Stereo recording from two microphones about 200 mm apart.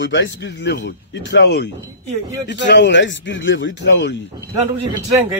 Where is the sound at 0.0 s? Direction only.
65° left (ahead or behind).